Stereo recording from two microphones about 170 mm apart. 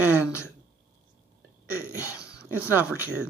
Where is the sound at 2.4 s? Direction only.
10° right (ahead or behind).